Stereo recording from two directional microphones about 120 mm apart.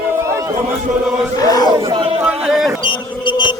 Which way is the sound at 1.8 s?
45° right (ahead or behind).